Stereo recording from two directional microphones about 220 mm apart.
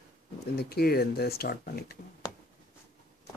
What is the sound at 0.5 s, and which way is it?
Speech, 45° left (ahead or behind).